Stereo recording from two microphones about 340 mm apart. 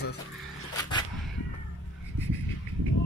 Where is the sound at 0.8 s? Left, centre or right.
Centre.